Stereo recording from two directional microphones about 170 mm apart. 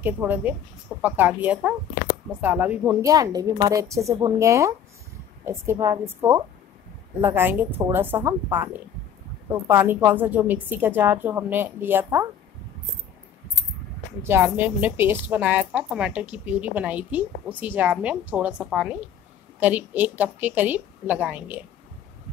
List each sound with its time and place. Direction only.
0.0 s a woman's voice: 10° right (ahead or behind)
3.0 s a woman's voice: 20° right (ahead or behind)
14.2 s a woman's voice: 15° right (ahead or behind)